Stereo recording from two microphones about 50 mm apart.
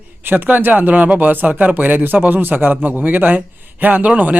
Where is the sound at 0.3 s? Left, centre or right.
Right.